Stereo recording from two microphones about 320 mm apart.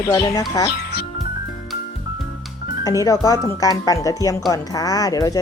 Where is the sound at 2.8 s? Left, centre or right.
Centre.